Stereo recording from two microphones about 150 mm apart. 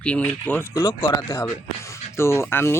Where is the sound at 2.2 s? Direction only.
15° left (ahead or behind).